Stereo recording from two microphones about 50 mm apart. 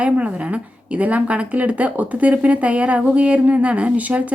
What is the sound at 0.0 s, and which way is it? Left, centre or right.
A woman's voice, right.